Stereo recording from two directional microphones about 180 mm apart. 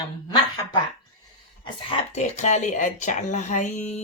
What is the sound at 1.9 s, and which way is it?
Speech, 40° left (ahead or behind).